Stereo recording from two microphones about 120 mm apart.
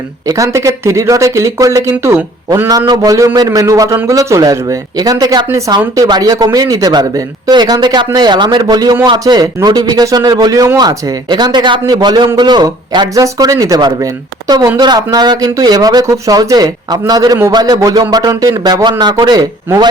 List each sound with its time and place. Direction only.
0.3 s speech: 25° right (ahead or behind)